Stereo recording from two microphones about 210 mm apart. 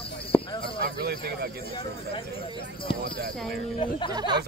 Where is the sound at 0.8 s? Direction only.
50° right (ahead or behind).